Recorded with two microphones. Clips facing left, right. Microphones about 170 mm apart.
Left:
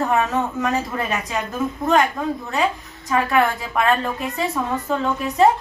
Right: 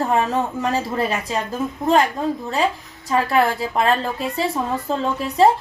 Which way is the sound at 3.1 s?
30° right (ahead or behind).